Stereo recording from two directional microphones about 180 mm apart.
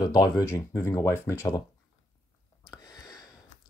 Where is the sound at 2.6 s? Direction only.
20° left (ahead or behind).